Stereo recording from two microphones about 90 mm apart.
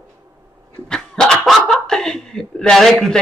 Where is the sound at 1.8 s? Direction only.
5° left (ahead or behind).